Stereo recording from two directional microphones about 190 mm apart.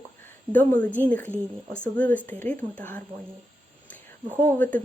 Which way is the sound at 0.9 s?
5° left (ahead or behind).